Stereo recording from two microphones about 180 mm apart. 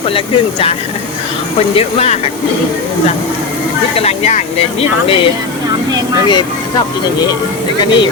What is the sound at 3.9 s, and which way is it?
Speech, 35° left (ahead or behind).